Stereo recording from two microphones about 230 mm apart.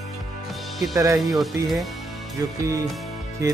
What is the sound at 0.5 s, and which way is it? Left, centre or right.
Music, centre.